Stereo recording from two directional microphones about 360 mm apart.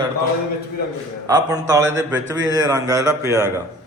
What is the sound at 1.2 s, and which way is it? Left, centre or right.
A man's voice, centre.